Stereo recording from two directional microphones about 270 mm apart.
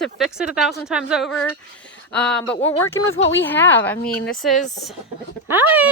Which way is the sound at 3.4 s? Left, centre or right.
Centre.